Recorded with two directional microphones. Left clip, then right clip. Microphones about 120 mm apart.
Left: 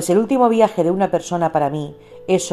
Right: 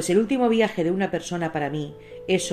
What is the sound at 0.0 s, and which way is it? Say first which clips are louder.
Speech: left 6 dB; 50° left (ahead or behind).